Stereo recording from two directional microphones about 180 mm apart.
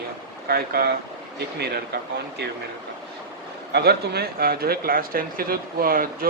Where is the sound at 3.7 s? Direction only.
60° right (ahead or behind).